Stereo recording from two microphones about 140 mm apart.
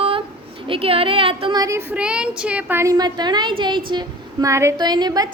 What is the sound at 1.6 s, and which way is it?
Speech, 20° right (ahead or behind).